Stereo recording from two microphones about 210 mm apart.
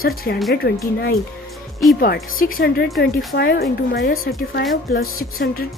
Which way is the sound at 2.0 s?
45° left (ahead or behind).